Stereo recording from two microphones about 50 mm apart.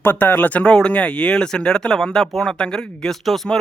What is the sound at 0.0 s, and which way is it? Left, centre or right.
Speech, left.